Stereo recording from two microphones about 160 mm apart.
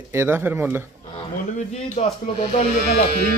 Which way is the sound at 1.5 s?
45° left (ahead or behind).